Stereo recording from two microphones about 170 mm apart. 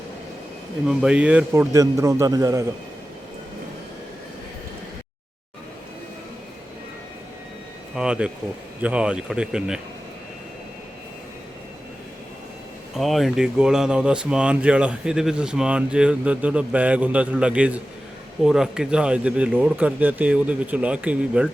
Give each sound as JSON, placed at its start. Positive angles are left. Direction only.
{"t": 0.9, "sound": "speech", "side_deg": -5}
{"t": 1.7, "sound": "a man's voice", "side_deg": -20}
{"t": 7.9, "sound": "a sound", "side_deg": -5}
{"t": 8.8, "sound": "speech", "side_deg": -5}
{"t": 13.0, "sound": "speech", "side_deg": 0}